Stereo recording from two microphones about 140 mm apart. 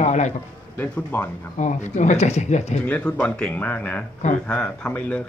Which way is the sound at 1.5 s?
60° left (ahead or behind).